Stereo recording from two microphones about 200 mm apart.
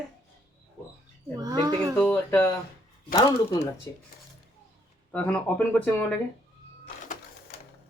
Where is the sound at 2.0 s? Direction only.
5° left (ahead or behind).